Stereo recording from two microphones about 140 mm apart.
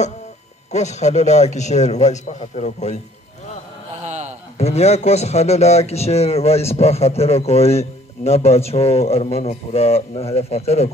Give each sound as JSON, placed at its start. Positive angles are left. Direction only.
{"t": 0.7, "sound": "a man's voice", "side_deg": 55}
{"t": 4.0, "sound": "a sound", "side_deg": -55}
{"t": 4.6, "sound": "a man's voice", "side_deg": 50}